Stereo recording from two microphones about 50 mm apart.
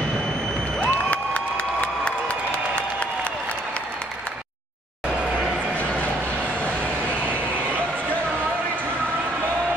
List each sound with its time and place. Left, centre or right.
0.8 s cheering: left